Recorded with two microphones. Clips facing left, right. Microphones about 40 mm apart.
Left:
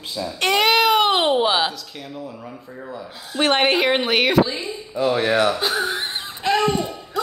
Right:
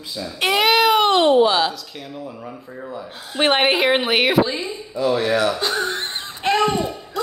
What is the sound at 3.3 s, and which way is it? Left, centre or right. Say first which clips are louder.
Speech: right 1 dB; right.